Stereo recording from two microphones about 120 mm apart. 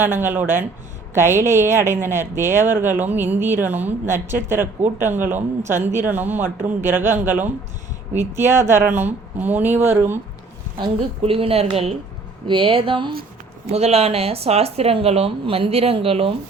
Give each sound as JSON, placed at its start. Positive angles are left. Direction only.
{"t": 0.0, "sound": "a woman's voice", "side_deg": -20}
{"t": 11.2, "sound": "speech", "side_deg": -50}
{"t": 12.5, "sound": "speech", "side_deg": -45}
{"t": 13.7, "sound": "speech", "side_deg": -60}